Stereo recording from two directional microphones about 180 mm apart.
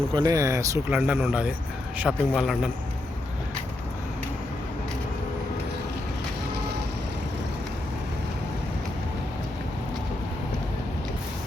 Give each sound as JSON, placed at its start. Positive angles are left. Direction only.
{"t": 0.1, "sound": "speech", "side_deg": -20}
{"t": 0.9, "sound": "a man's voice", "side_deg": -5}